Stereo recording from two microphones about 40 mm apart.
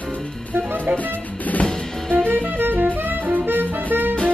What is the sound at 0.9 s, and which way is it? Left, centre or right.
Music, right.